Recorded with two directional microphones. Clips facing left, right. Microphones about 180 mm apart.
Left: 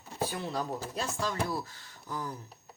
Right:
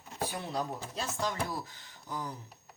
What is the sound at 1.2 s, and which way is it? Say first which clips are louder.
Speech: left 1 dB; 20° right (ahead or behind).